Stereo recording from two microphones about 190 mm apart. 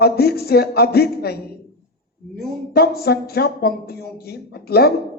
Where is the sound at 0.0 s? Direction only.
55° left (ahead or behind).